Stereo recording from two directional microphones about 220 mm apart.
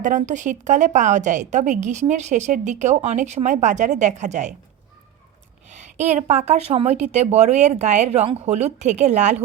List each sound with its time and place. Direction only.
0.0 s a woman's voice: 35° right (ahead or behind)
5.6 s a woman's voice: 30° right (ahead or behind)